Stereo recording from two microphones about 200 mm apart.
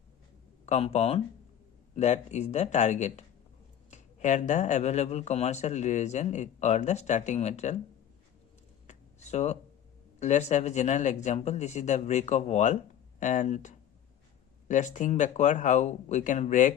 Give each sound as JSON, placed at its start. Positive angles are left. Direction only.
{"t": 0.6, "sound": "speech", "side_deg": 30}
{"t": 8.9, "sound": "a sound", "side_deg": 35}
{"t": 10.2, "sound": "speech", "side_deg": 35}